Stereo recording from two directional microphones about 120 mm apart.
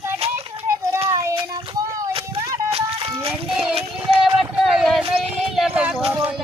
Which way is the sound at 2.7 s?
55° right (ahead or behind).